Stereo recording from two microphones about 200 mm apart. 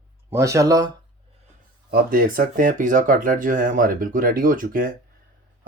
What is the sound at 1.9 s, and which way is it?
Speech, 45° right (ahead or behind).